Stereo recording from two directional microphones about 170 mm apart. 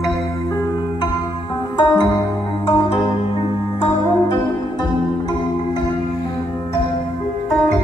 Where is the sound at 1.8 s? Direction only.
20° left (ahead or behind).